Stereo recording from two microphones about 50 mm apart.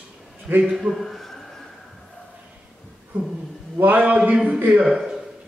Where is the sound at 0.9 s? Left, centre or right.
Centre.